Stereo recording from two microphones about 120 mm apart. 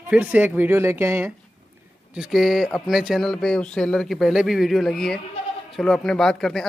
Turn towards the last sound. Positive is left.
turn(degrees=5)  # may be behind; listen again after turning